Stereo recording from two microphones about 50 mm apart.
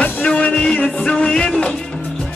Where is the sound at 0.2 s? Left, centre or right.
Left.